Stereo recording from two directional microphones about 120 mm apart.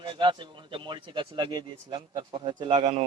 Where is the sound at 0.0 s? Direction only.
40° right (ahead or behind).